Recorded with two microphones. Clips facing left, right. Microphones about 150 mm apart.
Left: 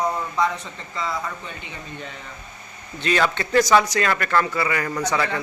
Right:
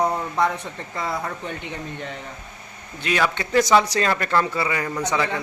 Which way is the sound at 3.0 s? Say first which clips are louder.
Left 1 dB; 10° right (ahead or behind).